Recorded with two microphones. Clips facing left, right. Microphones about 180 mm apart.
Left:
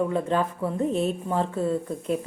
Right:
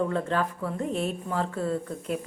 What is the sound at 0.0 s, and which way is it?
Speech, 15° left (ahead or behind).